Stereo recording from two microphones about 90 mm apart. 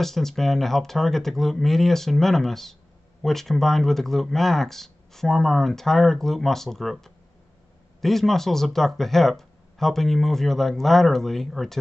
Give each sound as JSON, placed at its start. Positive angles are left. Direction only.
{"t": 0.0, "sound": "speech", "side_deg": 5}